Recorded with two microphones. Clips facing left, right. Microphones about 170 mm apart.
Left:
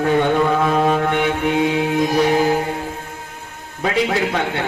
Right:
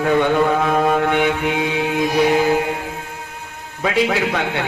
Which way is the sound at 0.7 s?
55° right (ahead or behind).